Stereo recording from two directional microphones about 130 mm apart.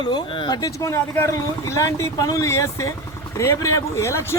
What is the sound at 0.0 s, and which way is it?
A man's voice, 40° left (ahead or behind).